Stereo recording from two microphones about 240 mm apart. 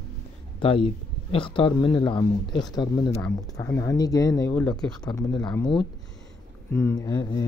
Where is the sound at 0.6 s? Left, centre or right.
Left.